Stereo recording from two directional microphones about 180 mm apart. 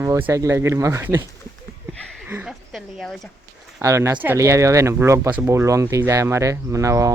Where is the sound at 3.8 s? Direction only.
15° right (ahead or behind).